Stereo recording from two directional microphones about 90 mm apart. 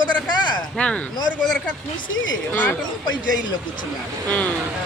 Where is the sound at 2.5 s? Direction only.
20° left (ahead or behind).